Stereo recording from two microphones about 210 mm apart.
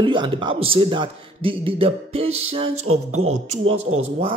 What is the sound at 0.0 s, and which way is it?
Speech, 20° right (ahead or behind).